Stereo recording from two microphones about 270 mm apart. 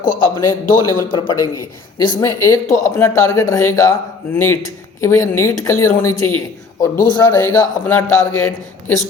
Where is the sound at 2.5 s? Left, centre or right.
Centre.